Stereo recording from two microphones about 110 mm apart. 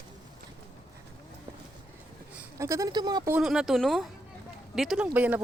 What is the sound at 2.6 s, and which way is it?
Speech, 30° right (ahead or behind).